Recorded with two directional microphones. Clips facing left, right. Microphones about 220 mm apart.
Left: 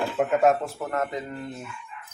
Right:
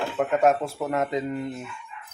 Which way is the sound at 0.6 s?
15° right (ahead or behind).